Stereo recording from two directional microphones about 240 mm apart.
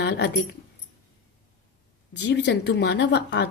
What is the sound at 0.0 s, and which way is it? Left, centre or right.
Keys jangling, left.